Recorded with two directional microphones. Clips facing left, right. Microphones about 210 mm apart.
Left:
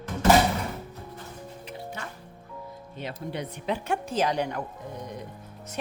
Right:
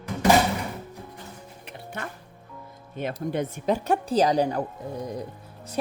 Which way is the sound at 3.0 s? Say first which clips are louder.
Right 6 dB; 45° right (ahead or behind).